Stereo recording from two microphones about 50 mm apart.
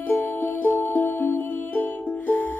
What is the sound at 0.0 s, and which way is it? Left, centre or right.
Music, left.